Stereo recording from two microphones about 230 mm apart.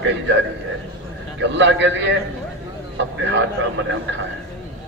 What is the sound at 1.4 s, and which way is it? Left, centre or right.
Speech, right.